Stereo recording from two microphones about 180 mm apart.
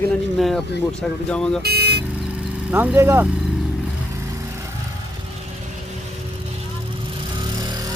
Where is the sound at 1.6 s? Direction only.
60° right (ahead or behind).